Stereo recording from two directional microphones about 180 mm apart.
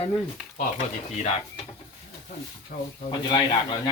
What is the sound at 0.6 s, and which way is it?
Speech, 45° left (ahead or behind).